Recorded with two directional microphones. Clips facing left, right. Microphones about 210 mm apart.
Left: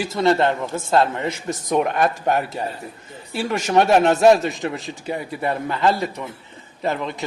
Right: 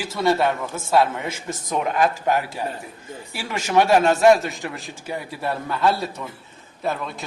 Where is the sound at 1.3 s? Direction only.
20° left (ahead or behind).